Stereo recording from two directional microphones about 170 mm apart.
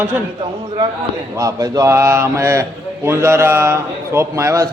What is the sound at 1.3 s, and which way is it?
A man's voice, 20° right (ahead or behind).